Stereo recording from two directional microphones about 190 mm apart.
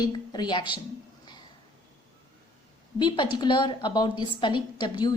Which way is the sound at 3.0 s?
25° left (ahead or behind).